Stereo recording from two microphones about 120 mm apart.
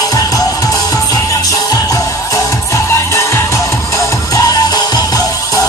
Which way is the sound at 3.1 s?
25° left (ahead or behind).